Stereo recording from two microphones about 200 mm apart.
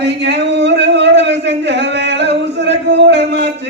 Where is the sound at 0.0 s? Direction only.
60° right (ahead or behind).